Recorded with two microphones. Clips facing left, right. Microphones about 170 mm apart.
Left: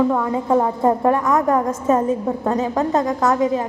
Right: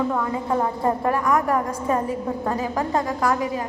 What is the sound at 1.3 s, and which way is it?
A woman's voice, 20° left (ahead or behind).